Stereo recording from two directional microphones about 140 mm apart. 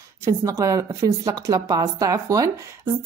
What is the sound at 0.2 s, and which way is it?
A woman's voice, 20° right (ahead or behind).